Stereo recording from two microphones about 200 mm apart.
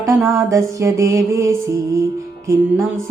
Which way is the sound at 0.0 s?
15° right (ahead or behind).